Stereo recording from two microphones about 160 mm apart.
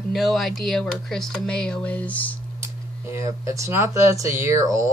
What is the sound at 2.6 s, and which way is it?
Speech, 20° right (ahead or behind).